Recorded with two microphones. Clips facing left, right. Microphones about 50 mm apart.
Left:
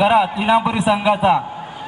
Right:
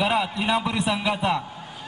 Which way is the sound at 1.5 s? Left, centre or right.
Left.